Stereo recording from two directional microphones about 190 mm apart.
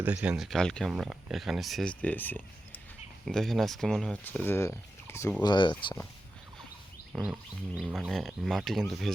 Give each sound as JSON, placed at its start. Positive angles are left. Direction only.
{"t": 0.0, "sound": "speech", "side_deg": -10}
{"t": 7.1, "sound": "roaring cats", "side_deg": -5}
{"t": 7.8, "sound": "speech", "side_deg": -5}